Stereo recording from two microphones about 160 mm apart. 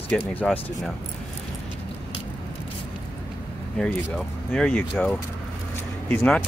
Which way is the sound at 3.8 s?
5° left (ahead or behind).